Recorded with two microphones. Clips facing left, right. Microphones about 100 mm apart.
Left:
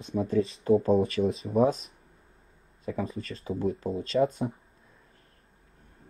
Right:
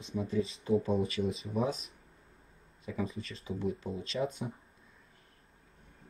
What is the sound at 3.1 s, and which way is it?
Speech, 35° left (ahead or behind).